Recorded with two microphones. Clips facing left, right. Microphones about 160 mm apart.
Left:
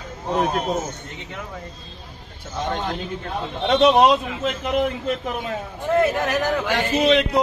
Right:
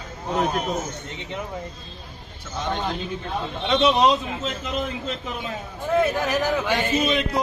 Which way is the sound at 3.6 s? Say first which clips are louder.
Left 4 dB; 55° left (ahead or behind).